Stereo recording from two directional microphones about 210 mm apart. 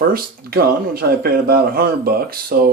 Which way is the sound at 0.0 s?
45° right (ahead or behind).